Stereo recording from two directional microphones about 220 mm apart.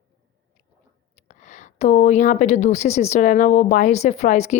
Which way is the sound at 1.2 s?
30° left (ahead or behind).